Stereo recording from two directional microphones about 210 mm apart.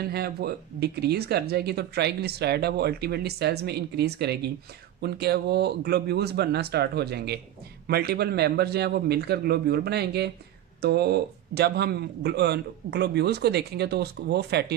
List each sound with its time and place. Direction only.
0.0 s speech: 50° right (ahead or behind)